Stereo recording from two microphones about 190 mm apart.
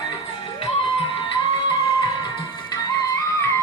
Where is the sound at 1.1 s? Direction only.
25° left (ahead or behind).